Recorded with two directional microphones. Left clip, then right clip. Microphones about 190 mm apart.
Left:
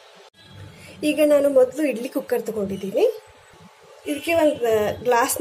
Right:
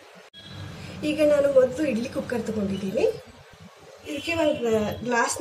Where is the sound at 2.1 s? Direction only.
35° left (ahead or behind).